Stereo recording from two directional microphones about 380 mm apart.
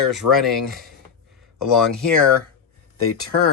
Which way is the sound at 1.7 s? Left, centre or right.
Centre.